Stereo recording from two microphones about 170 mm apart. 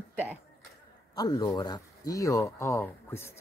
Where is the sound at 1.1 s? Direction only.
20° left (ahead or behind).